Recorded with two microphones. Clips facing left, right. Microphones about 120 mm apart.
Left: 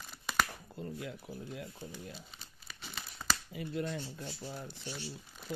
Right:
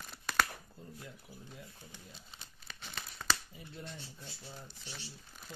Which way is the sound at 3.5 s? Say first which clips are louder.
Left 11 dB; 75° left (ahead or behind).